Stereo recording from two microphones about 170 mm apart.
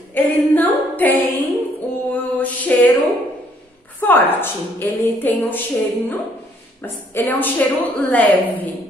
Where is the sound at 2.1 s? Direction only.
10° left (ahead or behind).